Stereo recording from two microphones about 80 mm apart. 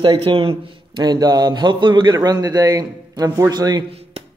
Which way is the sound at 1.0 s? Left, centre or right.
Right.